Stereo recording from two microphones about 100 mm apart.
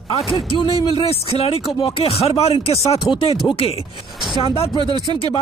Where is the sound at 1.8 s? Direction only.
65° left (ahead or behind); by 3.8 s 80° left.